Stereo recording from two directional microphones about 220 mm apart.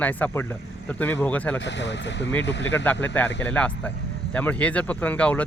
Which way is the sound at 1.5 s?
55° left (ahead or behind).